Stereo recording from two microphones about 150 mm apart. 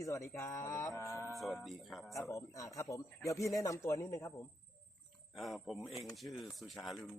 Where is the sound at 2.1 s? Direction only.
20° left (ahead or behind).